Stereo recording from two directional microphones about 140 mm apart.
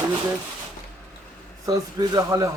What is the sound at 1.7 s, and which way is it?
Speech, 25° right (ahead or behind).